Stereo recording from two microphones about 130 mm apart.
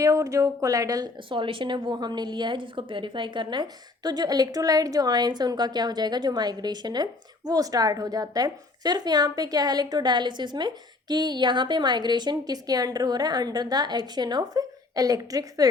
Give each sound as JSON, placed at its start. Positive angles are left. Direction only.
{"t": 0.0, "sound": "speech", "side_deg": -25}
{"t": 1.3, "sound": "a woman's voice", "side_deg": -40}